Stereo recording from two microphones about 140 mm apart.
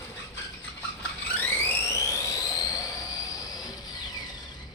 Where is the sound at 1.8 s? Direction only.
25° left (ahead or behind).